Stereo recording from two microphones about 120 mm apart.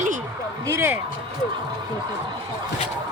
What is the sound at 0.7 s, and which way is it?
Speech, 20° right (ahead or behind).